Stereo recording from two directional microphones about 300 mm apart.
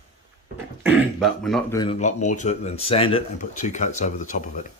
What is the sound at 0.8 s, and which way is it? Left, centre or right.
Speech, centre.